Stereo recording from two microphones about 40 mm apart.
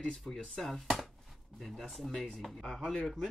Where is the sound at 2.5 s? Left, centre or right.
Centre.